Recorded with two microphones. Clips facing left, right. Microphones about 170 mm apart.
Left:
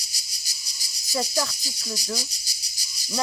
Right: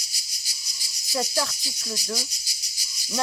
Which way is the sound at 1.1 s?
Centre (ahead or behind).